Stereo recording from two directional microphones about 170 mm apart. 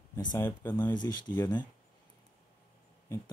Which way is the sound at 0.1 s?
20° left (ahead or behind).